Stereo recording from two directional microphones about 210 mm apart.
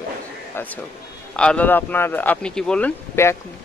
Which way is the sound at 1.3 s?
5° left (ahead or behind).